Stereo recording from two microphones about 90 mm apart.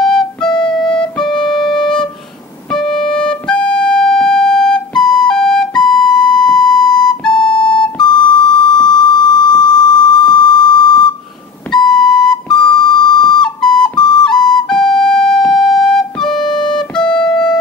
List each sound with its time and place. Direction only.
0.0 s flute: 5° left (ahead or behind)
0.6 s music: 10° left (ahead or behind)
1.2 s music: 55° left (ahead or behind)
2.7 s music: 5° left (ahead or behind)
8.0 s beep: 55° left (ahead or behind)
11.9 s flute: 5° left (ahead or behind)
12.8 s music: 60° left (ahead or behind)
13.4 s flute: 5° left (ahead or behind)
13.9 s flute: 55° left (ahead or behind)
14.5 s flute: 5° left (ahead or behind)
16.3 s music: 55° left (ahead or behind)
16.9 s music: 10° left (ahead or behind)